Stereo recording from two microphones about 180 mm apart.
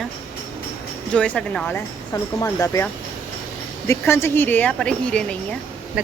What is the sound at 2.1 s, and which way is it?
Speech, 20° left (ahead or behind).